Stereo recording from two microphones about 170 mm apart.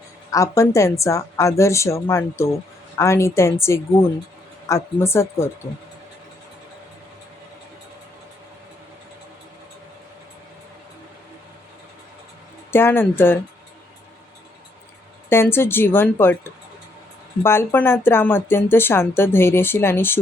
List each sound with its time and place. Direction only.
0.3 s speech: 20° left (ahead or behind)
12.7 s speech: 15° left (ahead or behind)
15.3 s speech: 15° left (ahead or behind)